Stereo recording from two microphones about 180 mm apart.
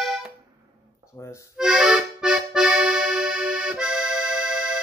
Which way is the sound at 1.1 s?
20° left (ahead or behind).